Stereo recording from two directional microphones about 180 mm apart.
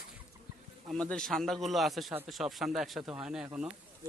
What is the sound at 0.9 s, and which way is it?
A man's voice, 5° left (ahead or behind).